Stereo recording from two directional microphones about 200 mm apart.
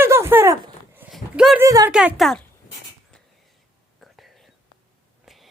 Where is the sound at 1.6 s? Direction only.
15° right (ahead or behind).